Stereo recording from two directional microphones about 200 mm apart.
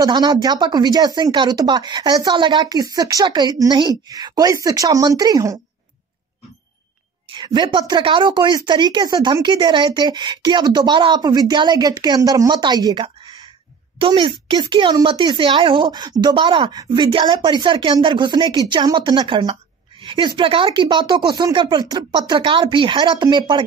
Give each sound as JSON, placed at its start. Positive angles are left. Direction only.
{"t": 0.0, "sound": "speech", "side_deg": -20}
{"t": 7.3, "sound": "speech", "side_deg": -20}